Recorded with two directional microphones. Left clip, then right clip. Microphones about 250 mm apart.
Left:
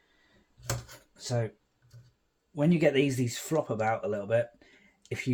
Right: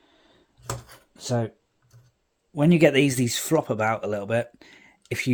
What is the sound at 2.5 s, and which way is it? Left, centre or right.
Speech, right.